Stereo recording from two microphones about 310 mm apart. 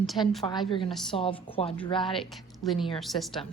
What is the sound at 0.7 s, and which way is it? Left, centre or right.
Speech, centre.